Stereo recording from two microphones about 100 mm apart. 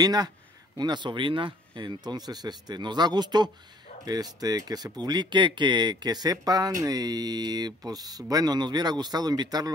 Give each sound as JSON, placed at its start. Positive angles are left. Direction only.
{"t": 0.0, "sound": "speech", "side_deg": -40}